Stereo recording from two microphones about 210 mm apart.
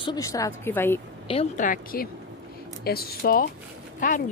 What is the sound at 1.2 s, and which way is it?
Speech, 30° left (ahead or behind).